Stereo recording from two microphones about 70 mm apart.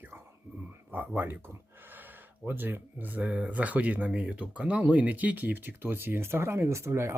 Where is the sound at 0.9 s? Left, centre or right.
Right.